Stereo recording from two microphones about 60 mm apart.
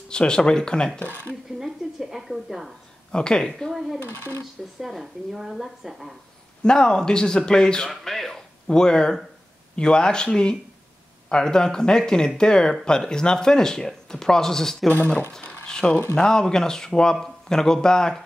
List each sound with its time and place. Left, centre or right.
0.1 s speech: centre
1.6 s speech: centre
3.1 s speech: centre
4.0 s speech: left
4.4 s speech: centre
6.6 s speech: centre
14.9 s speech: left
15.6 s a sound: centre
16.2 s speech: centre